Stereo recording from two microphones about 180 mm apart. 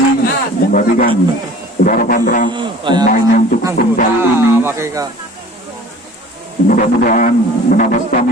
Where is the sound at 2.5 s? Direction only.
25° right (ahead or behind).